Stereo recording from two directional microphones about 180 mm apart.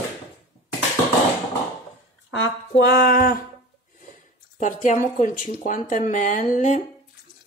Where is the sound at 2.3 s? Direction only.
90° left; by 3.4 s 55° left (ahead or behind).